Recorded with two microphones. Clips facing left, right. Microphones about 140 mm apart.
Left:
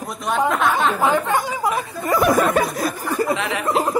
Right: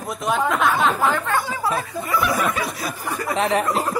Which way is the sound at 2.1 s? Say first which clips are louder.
Left 6 dB; 45° left (ahead or behind).